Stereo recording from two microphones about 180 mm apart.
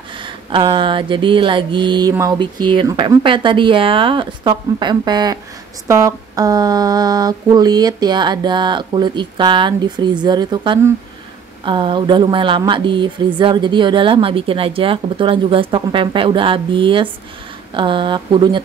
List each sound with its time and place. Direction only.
0.2 s speech: 30° right (ahead or behind)